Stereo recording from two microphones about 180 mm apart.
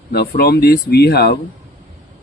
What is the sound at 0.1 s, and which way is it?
Speech, 60° left (ahead or behind).